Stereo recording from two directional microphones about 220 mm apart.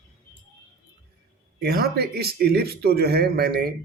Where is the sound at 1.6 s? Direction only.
45° right (ahead or behind).